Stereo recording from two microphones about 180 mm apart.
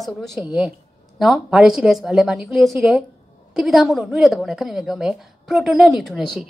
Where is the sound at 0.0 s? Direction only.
Centre (ahead or behind).